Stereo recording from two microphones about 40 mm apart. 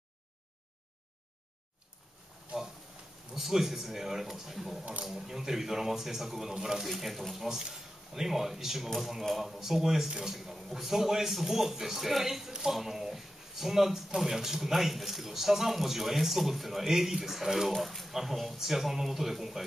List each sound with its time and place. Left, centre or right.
3.3 s a man's voice: centre